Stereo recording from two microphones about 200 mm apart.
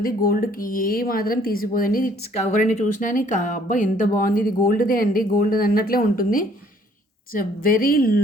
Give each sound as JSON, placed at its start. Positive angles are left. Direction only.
{"t": 0.0, "sound": "speech", "side_deg": 45}